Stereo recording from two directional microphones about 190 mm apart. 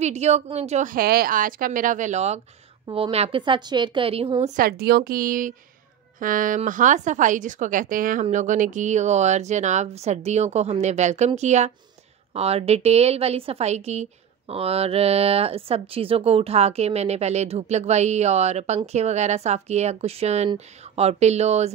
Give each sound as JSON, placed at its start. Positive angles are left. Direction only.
{"t": 0.0, "sound": "speech", "side_deg": -35}
{"t": 0.9, "sound": "a woman's voice", "side_deg": -50}
{"t": 4.6, "sound": "speech", "side_deg": -55}